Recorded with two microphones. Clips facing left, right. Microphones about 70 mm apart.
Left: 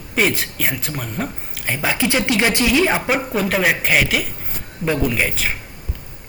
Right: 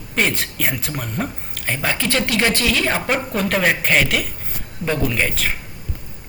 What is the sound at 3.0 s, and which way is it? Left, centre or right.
Speech, centre.